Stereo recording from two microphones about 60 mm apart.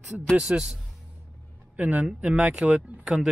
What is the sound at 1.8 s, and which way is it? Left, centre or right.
Speech, right.